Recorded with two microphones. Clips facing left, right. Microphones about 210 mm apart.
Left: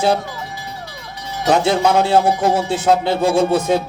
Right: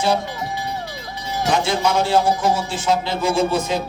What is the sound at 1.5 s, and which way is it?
A woman's voice, 60° left (ahead or behind).